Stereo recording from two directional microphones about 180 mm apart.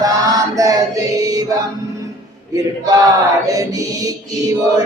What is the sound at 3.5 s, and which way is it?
Music, 20° right (ahead or behind).